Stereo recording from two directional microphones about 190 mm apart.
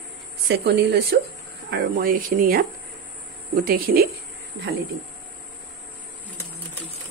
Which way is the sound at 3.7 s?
50° right (ahead or behind).